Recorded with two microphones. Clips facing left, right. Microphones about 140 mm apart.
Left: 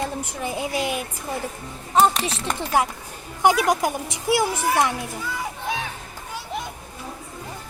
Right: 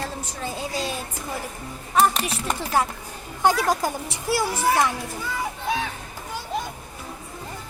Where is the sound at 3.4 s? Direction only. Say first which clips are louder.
Left 2 dB; 15° left (ahead or behind).